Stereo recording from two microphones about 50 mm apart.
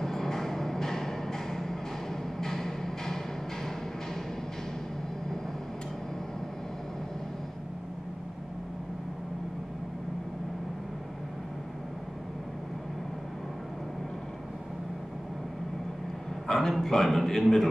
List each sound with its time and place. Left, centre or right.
0.0 s music: centre
16.4 s a man's voice: centre